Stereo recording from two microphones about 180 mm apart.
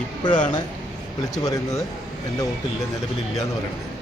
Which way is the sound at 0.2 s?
25° left (ahead or behind).